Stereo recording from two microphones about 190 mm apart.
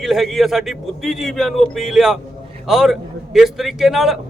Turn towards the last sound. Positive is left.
turn(degrees=0)  # may be behind; listen again after turning